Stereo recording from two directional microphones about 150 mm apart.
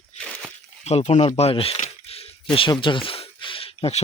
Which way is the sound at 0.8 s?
45° left (ahead or behind).